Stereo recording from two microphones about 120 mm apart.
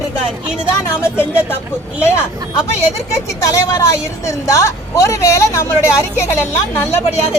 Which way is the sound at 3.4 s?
25° left (ahead or behind).